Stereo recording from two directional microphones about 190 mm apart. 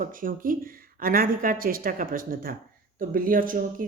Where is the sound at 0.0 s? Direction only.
45° right (ahead or behind).